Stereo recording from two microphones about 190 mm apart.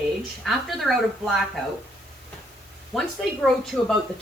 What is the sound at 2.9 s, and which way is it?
Speech, centre (ahead or behind).